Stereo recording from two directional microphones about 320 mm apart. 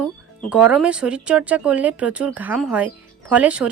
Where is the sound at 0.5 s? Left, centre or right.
Centre.